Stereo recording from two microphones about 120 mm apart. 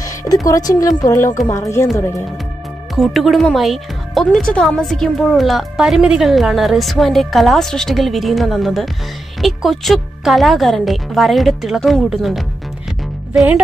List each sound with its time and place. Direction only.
0.0 s music: 25° left (ahead or behind)
0.5 s a woman's voice: 30° left (ahead or behind)
3.0 s speech: centre (ahead or behind)